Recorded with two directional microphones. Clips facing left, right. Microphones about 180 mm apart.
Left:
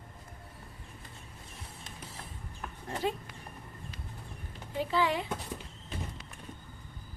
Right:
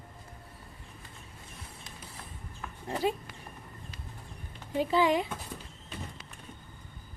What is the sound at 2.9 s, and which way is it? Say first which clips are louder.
Speech: right 3 dB; 10° right (ahead or behind).